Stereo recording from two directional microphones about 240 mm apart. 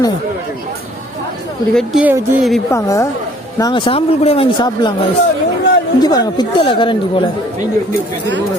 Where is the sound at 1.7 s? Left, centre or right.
Centre.